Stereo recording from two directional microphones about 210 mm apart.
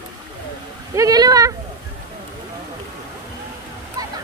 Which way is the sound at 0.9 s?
15° right (ahead or behind).